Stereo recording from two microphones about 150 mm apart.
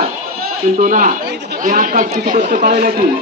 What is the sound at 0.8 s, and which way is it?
A man's voice, 60° right (ahead or behind).